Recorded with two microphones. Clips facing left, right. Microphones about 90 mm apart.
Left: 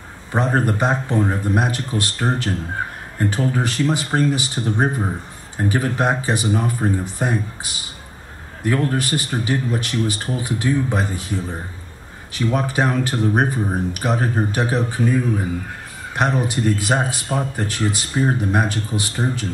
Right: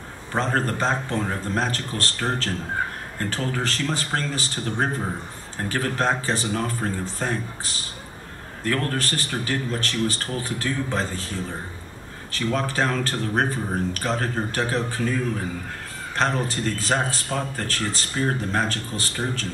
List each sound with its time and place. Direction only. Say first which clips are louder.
0.3 s speech: left 4 dB; 15° left (ahead or behind)